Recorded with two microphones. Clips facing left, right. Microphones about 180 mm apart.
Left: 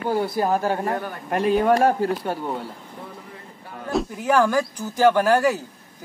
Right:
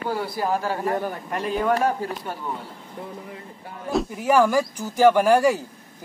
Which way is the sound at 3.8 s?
5° right (ahead or behind).